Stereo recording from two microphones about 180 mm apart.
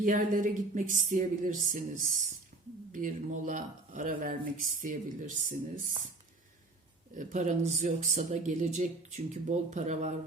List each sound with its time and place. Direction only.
0.0 s speech: 50° right (ahead or behind)
2.9 s speech: 45° right (ahead or behind)
7.2 s speech: 45° right (ahead or behind)